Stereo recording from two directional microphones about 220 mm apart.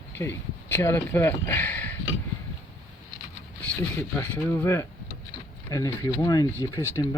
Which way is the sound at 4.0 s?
10° left (ahead or behind).